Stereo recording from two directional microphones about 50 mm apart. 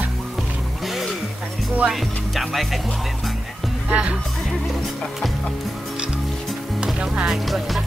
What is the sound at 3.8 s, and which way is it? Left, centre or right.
Speech, right.